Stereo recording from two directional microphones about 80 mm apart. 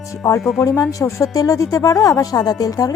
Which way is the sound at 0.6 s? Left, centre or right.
Left.